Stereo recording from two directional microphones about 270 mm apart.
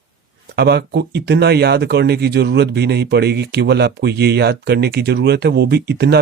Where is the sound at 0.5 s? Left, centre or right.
Right.